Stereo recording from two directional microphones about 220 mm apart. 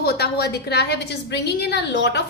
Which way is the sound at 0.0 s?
45° left (ahead or behind).